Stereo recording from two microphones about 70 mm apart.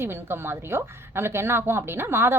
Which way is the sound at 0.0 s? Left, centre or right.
Right.